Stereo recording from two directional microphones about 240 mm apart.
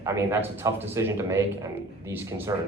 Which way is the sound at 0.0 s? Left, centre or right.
Centre.